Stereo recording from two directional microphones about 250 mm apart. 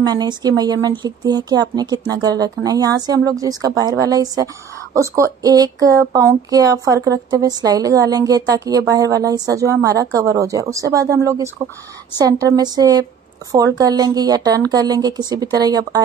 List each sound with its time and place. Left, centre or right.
0.0 s speech: centre